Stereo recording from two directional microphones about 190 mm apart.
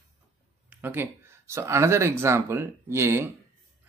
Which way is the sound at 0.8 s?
10° right (ahead or behind).